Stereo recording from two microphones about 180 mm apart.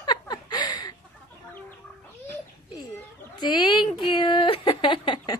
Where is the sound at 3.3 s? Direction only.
25° left (ahead or behind).